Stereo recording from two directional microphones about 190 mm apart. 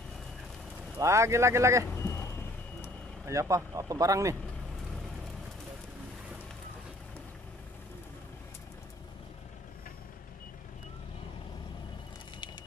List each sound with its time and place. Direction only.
0.9 s speech: 15° right (ahead or behind)
3.3 s speech: 15° right (ahead or behind)